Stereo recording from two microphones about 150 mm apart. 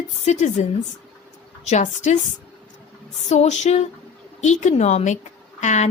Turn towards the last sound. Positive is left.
turn(degrees=50)  # may be behind; listen again after turning